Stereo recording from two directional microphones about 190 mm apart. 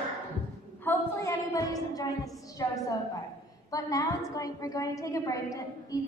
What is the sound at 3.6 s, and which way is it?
A woman's voice, 20° left (ahead or behind).